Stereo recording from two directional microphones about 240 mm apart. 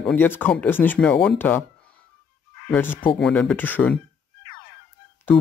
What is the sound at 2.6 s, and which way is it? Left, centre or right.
Speech, centre.